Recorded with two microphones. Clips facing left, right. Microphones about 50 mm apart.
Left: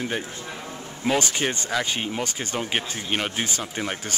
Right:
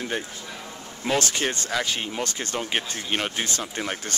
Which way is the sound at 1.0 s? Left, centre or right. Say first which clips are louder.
Left 1 dB; centre.